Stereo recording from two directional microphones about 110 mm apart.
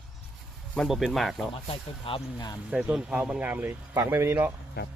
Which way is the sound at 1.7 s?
55° left (ahead or behind).